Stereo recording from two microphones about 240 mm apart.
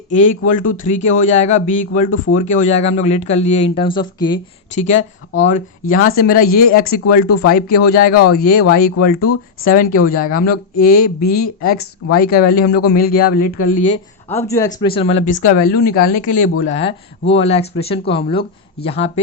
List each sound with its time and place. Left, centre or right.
0.2 s speech: left
2.0 s speech: left
2.4 s speech: left
4.7 s speech: left
13.1 s speech: left
13.7 s speech: left
14.3 s speech: centre